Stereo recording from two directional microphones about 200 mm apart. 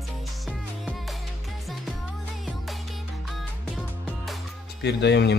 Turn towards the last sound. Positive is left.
turn(degrees=60)  # may be behind; listen again after turning